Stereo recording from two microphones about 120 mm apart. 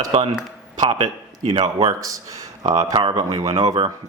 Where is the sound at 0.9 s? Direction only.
60° right (ahead or behind).